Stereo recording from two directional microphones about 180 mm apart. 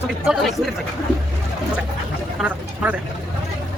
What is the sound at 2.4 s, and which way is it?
Speech, 5° right (ahead or behind).